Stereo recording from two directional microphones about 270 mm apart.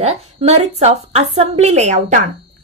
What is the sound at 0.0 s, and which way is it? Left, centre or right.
A woman's voice, right.